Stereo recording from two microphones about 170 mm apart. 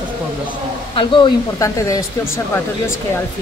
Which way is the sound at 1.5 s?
20° left (ahead or behind).